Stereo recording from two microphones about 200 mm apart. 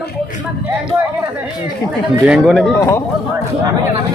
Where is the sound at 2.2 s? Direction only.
Centre (ahead or behind).